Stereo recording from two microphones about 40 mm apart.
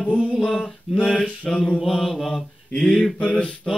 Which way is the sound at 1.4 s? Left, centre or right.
Left.